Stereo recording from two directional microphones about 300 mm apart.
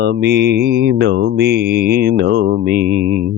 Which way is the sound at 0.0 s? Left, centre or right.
Right.